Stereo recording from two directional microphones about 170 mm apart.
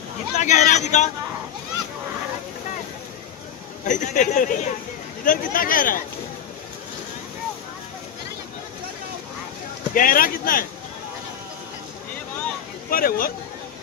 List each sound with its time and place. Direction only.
0.4 s speech: 45° left (ahead or behind)
3.8 s speech: 45° left (ahead or behind)
9.9 s speech: 55° left (ahead or behind)
12.9 s speech: 60° left (ahead or behind)